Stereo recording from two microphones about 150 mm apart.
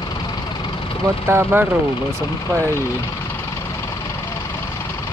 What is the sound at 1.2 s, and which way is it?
Speech, 15° right (ahead or behind).